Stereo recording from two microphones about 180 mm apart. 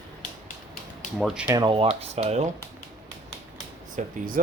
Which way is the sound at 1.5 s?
25° right (ahead or behind).